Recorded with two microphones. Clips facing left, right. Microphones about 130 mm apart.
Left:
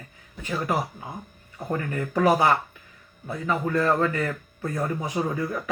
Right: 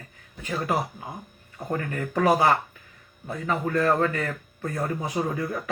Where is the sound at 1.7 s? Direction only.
30° left (ahead or behind).